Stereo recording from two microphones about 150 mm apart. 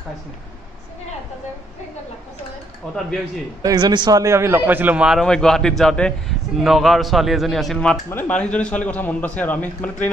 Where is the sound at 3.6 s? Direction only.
25° right (ahead or behind).